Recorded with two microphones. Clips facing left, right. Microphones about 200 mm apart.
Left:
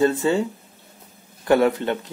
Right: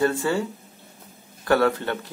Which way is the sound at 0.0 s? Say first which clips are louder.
Left 3 dB; 20° left (ahead or behind).